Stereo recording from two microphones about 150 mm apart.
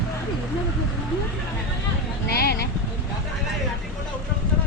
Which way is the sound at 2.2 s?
90° left.